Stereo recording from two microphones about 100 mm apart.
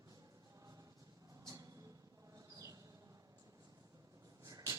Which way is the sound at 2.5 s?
35° right (ahead or behind).